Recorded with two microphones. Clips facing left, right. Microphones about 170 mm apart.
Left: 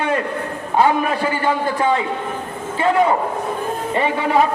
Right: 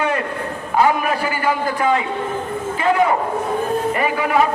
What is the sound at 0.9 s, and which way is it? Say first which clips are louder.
A man's voice: left 1 dB; 25° left (ahead or behind).